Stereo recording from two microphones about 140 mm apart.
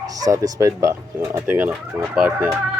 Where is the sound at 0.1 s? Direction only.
25° right (ahead or behind); by 2.6 s 10° right (ahead or behind).